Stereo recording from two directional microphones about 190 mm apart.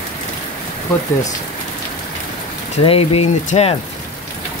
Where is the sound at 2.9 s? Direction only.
30° left (ahead or behind).